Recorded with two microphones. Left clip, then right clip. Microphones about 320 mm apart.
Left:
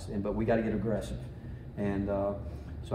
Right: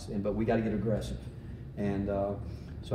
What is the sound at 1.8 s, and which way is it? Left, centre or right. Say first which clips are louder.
Speech: even; centre.